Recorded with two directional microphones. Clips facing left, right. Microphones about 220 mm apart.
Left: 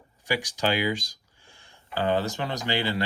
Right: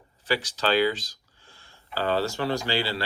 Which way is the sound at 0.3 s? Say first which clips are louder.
Right 1 dB; 15° left (ahead or behind).